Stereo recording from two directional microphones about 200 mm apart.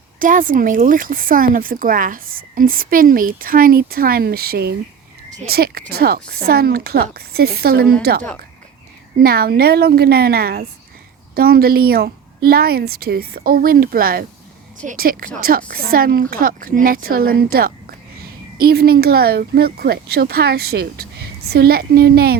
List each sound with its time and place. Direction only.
0.2 s speech: 45° right (ahead or behind)
9.2 s speech: 50° right (ahead or behind)